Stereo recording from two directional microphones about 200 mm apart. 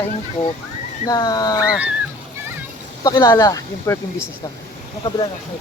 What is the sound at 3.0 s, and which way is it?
Speech, 20° left (ahead or behind).